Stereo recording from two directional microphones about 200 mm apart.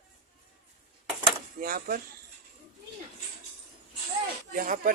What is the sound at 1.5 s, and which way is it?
Speech, 45° right (ahead or behind).